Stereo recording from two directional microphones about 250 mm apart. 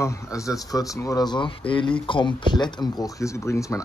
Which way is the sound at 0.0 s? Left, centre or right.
Centre.